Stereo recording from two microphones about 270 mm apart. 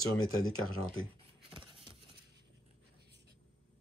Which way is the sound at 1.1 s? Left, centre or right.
Centre.